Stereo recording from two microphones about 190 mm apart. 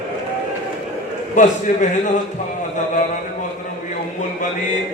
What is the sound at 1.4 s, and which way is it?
Speech, 40° left (ahead or behind).